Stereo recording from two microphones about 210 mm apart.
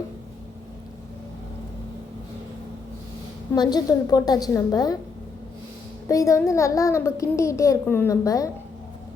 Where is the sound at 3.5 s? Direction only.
20° left (ahead or behind).